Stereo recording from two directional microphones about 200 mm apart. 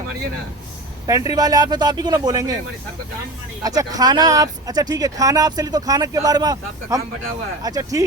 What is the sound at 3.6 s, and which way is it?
Speech, 20° right (ahead or behind).